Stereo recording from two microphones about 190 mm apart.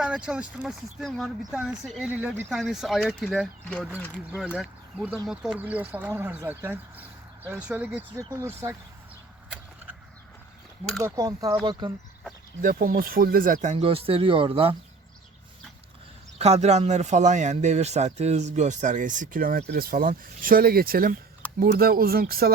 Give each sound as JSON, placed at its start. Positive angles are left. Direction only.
{"t": 0.0, "sound": "speech", "side_deg": -5}
{"t": 11.0, "sound": "speech", "side_deg": -20}
{"t": 12.6, "sound": "speech", "side_deg": -50}
{"t": 16.4, "sound": "speech", "side_deg": -35}